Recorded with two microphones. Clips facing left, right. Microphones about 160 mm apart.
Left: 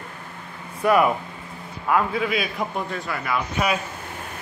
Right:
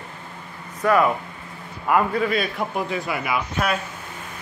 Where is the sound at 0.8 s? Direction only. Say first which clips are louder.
Even; 15° left (ahead or behind).